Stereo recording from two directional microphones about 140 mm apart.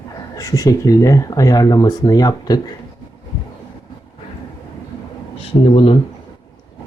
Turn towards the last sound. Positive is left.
turn(degrees=40)  # may be behind; listen again after turning